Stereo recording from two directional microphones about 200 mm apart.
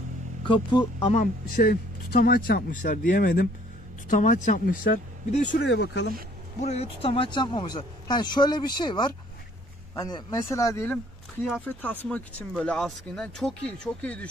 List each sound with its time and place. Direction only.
1.1 s speech: 45° left (ahead or behind)
5.6 s speech: 60° left (ahead or behind)
6.6 s speech: 30° left (ahead or behind); by 14.2 s 5° left (ahead or behind)